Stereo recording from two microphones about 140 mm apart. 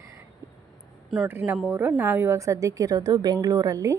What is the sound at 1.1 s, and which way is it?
Speech, centre (ahead or behind).